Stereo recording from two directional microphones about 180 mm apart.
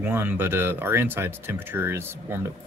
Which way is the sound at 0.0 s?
10° right (ahead or behind).